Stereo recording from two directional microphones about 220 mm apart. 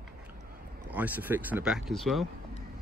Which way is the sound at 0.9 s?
10° right (ahead or behind).